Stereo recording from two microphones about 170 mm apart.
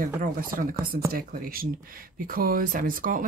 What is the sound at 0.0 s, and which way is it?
Speech, 55° right (ahead or behind).